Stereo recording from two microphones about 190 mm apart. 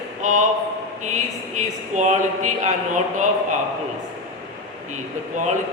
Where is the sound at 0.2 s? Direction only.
40° right (ahead or behind).